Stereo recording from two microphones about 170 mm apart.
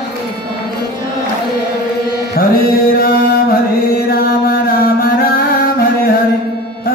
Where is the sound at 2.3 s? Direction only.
60° left (ahead or behind).